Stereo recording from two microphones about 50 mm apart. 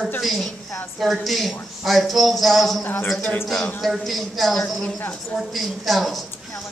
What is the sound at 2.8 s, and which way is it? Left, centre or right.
Speech, left.